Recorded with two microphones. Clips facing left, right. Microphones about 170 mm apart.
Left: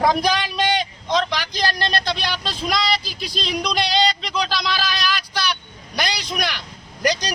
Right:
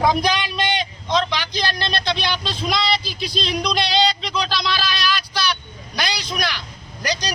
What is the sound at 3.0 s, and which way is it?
Speech, 45° left (ahead or behind).